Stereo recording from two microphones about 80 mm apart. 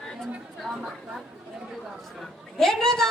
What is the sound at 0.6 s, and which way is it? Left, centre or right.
Speech, centre.